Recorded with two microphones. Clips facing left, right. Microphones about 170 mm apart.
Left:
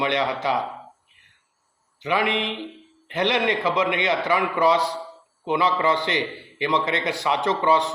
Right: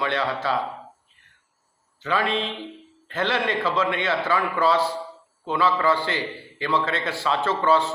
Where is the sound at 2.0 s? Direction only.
15° left (ahead or behind).